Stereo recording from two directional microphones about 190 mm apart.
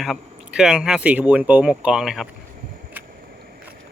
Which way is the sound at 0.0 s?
Centre (ahead or behind).